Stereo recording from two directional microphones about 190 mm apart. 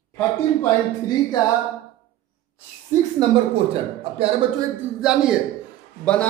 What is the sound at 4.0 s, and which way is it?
Speech, 30° right (ahead or behind).